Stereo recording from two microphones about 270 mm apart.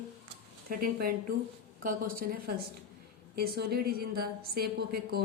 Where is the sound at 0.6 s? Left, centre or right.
Right.